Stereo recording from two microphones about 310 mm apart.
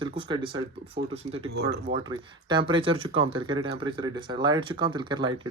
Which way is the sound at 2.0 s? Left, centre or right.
Centre.